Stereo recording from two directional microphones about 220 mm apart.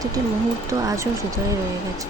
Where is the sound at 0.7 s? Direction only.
15° right (ahead or behind).